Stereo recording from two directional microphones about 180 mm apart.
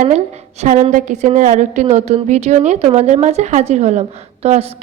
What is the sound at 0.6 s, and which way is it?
A woman's voice, 45° right (ahead or behind).